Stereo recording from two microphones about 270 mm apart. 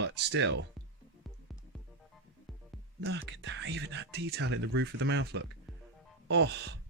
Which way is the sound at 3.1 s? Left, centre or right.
Right.